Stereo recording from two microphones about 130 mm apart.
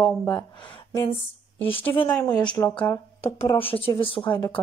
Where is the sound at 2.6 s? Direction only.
30° left (ahead or behind).